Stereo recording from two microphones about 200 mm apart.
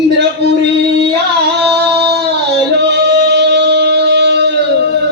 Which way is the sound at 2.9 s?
55° right (ahead or behind).